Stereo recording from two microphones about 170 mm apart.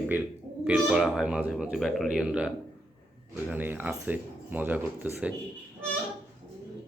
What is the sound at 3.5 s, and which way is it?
Speech, 10° right (ahead or behind).